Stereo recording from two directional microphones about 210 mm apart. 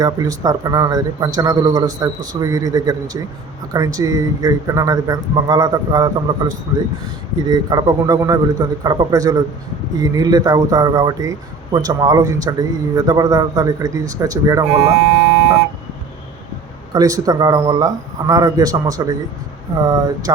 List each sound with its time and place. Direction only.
0.0 s speech: 15° right (ahead or behind)
16.9 s speech: 15° right (ahead or behind)